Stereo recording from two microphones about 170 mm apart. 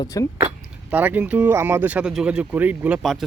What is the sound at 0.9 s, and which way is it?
Speech, 10° right (ahead or behind).